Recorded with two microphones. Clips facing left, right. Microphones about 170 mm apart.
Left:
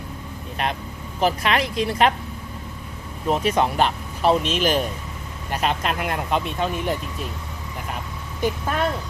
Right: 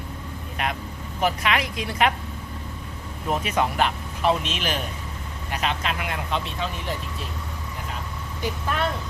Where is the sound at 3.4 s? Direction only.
30° left (ahead or behind); by 6.7 s 50° left (ahead or behind).